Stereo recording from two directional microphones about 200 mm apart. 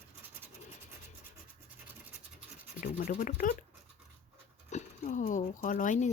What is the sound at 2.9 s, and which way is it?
Speech, 35° left (ahead or behind).